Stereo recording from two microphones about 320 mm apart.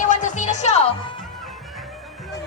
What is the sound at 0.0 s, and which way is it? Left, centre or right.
Music, left.